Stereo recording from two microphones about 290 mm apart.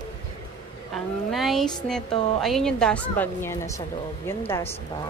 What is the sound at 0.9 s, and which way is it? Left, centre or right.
Speech, centre.